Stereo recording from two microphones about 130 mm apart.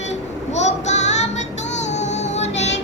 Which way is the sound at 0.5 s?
60° left (ahead or behind).